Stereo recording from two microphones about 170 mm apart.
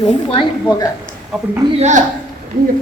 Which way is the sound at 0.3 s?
25° left (ahead or behind).